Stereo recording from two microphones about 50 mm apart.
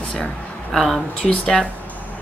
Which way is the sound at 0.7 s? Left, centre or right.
Centre.